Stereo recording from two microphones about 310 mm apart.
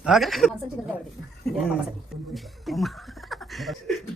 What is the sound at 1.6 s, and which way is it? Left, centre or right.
Speech, centre.